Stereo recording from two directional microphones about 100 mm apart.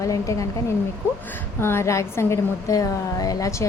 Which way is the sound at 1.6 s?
25° left (ahead or behind).